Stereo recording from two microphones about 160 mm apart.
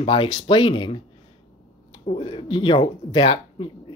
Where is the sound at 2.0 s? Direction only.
35° left (ahead or behind).